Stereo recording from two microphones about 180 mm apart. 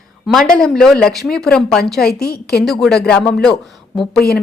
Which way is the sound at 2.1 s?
60° left (ahead or behind).